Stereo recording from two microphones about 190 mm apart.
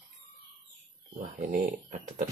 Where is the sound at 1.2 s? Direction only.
45° right (ahead or behind).